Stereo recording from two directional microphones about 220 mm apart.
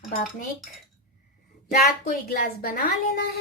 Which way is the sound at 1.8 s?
45° left (ahead or behind).